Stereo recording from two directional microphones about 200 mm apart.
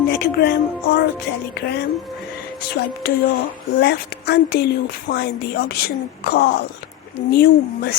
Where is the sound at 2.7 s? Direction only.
50° left (ahead or behind).